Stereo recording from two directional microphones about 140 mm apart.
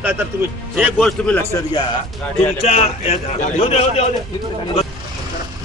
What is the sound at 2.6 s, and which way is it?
A man's voice, 45° left (ahead or behind).